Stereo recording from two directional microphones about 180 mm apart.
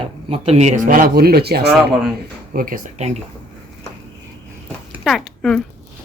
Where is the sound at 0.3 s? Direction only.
35° right (ahead or behind); by 1.7 s 60° right (ahead or behind).